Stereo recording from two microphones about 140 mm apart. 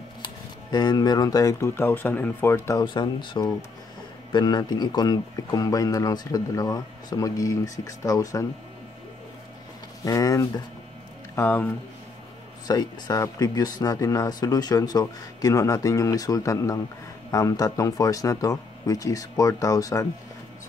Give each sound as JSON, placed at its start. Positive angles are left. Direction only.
{"t": 0.2, "sound": "speech", "side_deg": 30}
{"t": 2.8, "sound": "speech", "side_deg": 30}
{"t": 10.0, "sound": "speech", "side_deg": 25}
{"t": 11.3, "sound": "speech", "side_deg": 10}
{"t": 12.6, "sound": "speech", "side_deg": 25}